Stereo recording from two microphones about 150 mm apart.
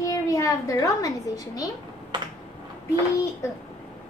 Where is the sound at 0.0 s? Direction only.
20° left (ahead or behind).